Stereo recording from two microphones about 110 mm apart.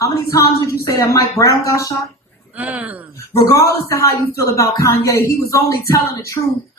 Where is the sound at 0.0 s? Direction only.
30° left (ahead or behind).